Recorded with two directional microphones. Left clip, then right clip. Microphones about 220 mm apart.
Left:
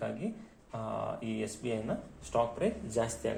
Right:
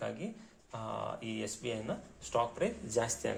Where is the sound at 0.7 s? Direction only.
40° right (ahead or behind).